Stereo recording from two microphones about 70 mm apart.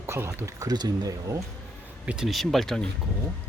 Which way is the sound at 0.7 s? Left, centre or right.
Right.